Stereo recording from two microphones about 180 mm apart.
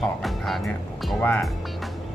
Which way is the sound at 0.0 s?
Centre (ahead or behind).